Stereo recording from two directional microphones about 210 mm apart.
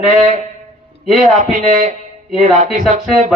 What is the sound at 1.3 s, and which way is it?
A man's voice, 35° right (ahead or behind).